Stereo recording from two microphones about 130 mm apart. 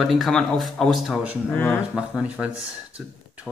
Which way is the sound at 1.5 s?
15° left (ahead or behind).